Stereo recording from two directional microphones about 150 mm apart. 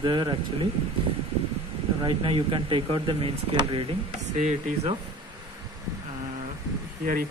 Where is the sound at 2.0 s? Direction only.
35° right (ahead or behind).